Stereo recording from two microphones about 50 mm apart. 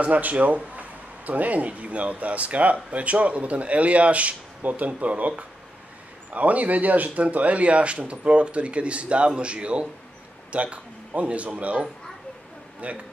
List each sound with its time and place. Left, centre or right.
0.0 s speech: right